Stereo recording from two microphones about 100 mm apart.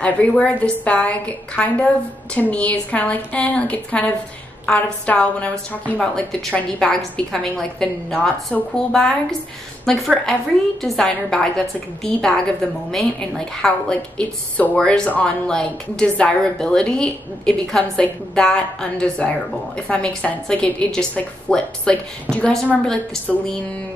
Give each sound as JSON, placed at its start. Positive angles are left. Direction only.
{"t": 0.0, "sound": "a woman's voice", "side_deg": 15}
{"t": 13.6, "sound": "a woman's voice", "side_deg": 10}